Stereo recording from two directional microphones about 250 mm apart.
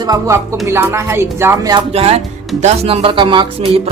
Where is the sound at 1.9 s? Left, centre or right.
Right.